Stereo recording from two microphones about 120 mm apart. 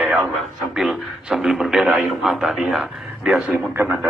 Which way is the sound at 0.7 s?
5° right (ahead or behind).